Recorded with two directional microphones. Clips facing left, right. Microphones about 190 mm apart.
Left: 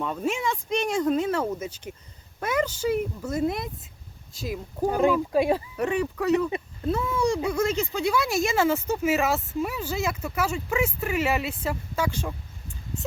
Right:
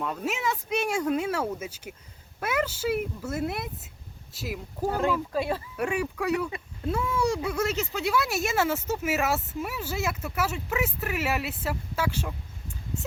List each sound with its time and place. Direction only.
0.0 s speech: centre (ahead or behind)
4.8 s speech: 15° left (ahead or behind)
5.7 s speech: 10° right (ahead or behind)